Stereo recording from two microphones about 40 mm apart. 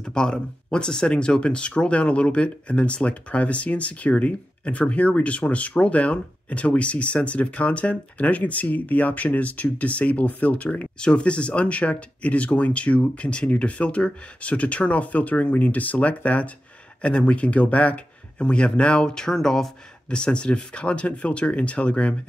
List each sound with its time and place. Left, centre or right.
0.0 s speech: centre; by 10.9 s left
11.0 s speech: left
19.0 s speech: centre
20.1 s speech: left